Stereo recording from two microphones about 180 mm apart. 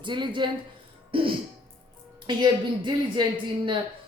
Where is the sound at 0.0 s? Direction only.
25° right (ahead or behind).